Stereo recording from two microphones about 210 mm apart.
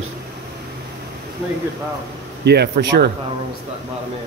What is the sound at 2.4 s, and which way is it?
Speech, 50° right (ahead or behind).